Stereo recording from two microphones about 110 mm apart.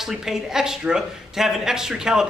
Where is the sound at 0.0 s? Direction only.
5° right (ahead or behind).